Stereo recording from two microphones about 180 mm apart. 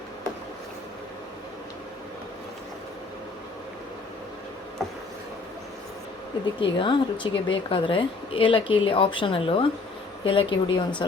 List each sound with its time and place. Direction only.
6.6 s a woman's voice: 25° left (ahead or behind)